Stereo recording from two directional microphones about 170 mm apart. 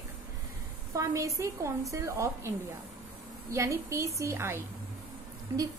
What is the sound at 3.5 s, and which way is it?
A woman's voice, 15° right (ahead or behind).